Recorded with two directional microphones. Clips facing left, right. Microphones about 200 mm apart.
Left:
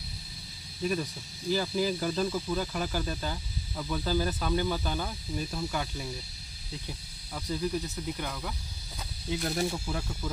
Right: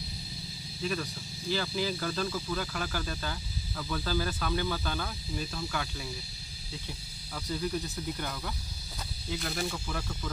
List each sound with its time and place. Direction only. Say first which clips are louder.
1.5 s speech: left 3 dB; 15° left (ahead or behind)
7.3 s speech: left 2 dB; 10° left (ahead or behind)
9.3 s speech: left 4 dB; 25° left (ahead or behind)
9.9 s speech: left 2 dB; 10° left (ahead or behind)